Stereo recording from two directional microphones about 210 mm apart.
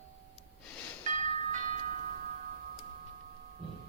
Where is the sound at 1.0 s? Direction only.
35° right (ahead or behind).